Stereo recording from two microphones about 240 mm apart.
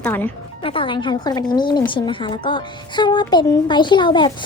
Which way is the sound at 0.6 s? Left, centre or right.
Left.